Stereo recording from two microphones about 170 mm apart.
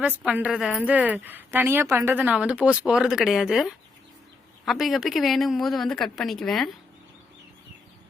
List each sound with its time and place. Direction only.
0.2 s a woman's voice: 5° right (ahead or behind)